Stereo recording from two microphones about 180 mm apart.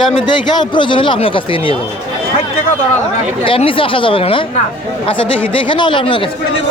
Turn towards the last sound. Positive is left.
turn(degrees=25)  # may be behind; listen again after turning